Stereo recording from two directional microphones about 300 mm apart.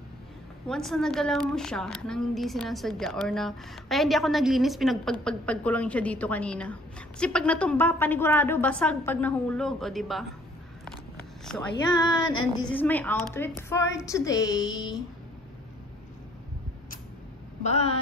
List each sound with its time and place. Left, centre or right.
0.7 s a woman's voice: centre
11.9 s a woman's voice: centre
17.6 s speech: left